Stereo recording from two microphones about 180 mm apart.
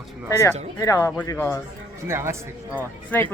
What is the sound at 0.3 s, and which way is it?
Speech, 15° left (ahead or behind).